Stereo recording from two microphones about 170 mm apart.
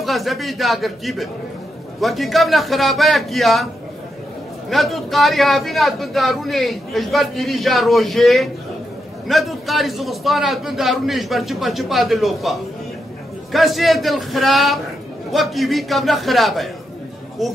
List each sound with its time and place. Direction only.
0.0 s a man's voice: centre (ahead or behind)
4.6 s a man's voice: centre (ahead or behind)